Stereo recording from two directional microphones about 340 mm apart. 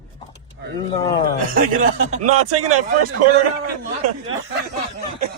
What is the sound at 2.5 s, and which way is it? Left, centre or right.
Speech, right.